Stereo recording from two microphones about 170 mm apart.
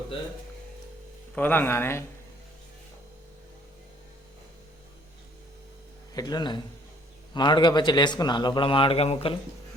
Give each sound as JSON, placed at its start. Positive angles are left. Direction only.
{"t": 1.4, "sound": "speech", "side_deg": 10}
{"t": 6.1, "sound": "speech", "side_deg": 25}